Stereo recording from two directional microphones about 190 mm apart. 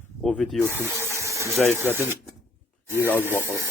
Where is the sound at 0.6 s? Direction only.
15° right (ahead or behind).